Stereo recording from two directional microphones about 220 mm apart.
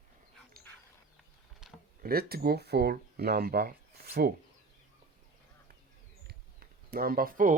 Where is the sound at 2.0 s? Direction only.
45° right (ahead or behind).